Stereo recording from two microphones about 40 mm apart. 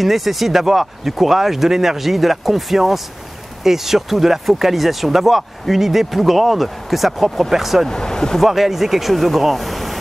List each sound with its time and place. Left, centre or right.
0.0 s speech: centre
7.9 s speech: centre
8.4 s speech: centre